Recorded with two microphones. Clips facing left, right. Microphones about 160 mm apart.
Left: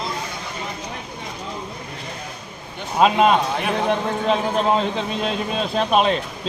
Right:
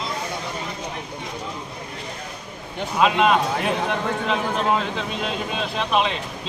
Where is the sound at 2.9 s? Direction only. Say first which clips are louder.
Left 2 dB; 40° left (ahead or behind).